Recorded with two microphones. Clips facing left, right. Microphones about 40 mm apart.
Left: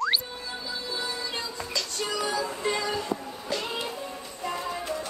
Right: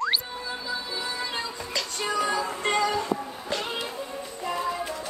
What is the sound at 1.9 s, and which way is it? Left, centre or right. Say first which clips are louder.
Music: right 3 dB; right.